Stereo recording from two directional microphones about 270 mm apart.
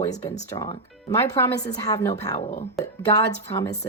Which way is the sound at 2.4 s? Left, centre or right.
Left.